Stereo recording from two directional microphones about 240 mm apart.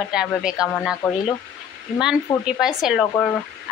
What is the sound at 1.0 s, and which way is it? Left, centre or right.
Speech, centre.